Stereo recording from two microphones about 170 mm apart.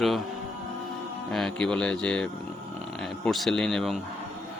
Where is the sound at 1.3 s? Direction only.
5° left (ahead or behind).